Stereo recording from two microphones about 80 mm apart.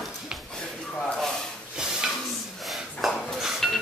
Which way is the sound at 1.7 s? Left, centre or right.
Centre.